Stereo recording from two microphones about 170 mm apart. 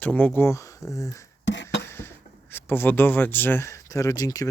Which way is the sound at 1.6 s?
15° left (ahead or behind).